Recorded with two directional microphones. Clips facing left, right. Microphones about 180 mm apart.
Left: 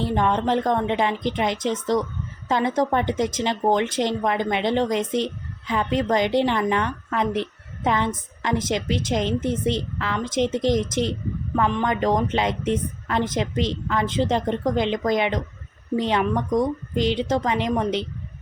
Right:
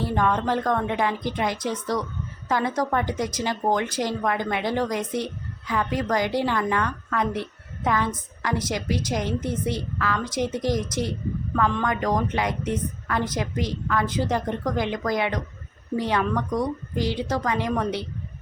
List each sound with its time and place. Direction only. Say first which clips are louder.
0.0 s speech: left 2 dB; 25° left (ahead or behind)